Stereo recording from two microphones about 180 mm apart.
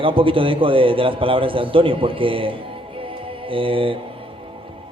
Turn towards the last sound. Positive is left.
turn(degrees=-30)  # may be behind; listen again after turning